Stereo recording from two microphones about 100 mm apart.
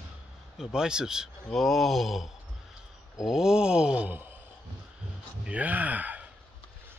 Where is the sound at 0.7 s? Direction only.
5° right (ahead or behind).